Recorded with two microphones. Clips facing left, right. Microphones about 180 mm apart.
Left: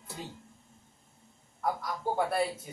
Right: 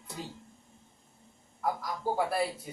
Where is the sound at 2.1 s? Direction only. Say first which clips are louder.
Left 1 dB; centre (ahead or behind).